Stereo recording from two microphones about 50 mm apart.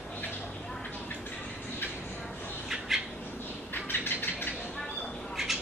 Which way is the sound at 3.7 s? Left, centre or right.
Left.